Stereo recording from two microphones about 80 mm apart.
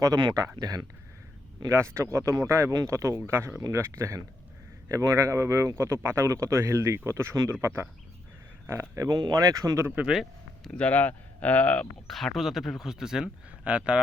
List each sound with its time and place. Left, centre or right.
0.6 s speech: right
1.6 s speech: right
9.0 s speech: right
9.8 s speech: right
10.6 s speech: centre
12.0 s a man's voice: centre